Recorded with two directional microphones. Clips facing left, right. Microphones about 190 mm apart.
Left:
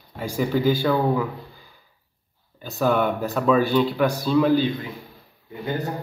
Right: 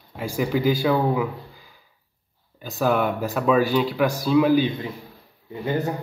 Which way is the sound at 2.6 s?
5° right (ahead or behind).